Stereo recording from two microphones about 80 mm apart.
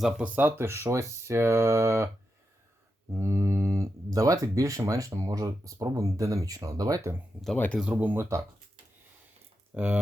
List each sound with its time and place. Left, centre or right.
0.2 s speech: right
3.1 s speech: right
7.5 s speech: centre
7.8 s speech: centre
9.7 s speech: centre